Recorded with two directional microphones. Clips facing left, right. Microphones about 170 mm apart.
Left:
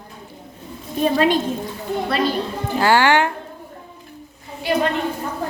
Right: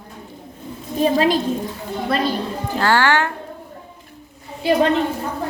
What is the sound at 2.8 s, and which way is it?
Speech, 15° left (ahead or behind).